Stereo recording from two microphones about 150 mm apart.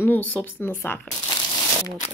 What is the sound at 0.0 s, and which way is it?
Speech, 10° left (ahead or behind).